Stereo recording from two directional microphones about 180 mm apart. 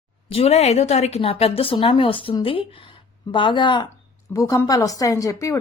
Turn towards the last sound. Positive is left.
turn(degrees=20)  # may be behind; listen again after turning